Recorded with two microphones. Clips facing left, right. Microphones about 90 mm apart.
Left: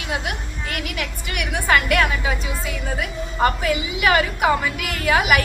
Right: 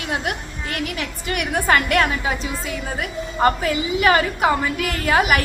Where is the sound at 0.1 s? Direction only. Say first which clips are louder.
Right 1 dB; 40° right (ahead or behind).